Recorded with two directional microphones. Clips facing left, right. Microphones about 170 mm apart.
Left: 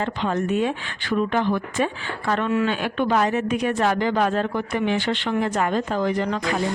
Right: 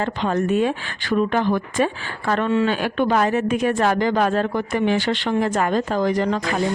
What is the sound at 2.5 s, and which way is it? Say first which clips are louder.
A woman's voice: right 3 dB; 30° right (ahead or behind).